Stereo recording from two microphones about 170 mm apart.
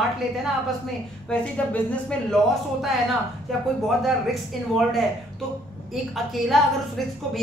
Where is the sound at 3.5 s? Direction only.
Centre (ahead or behind).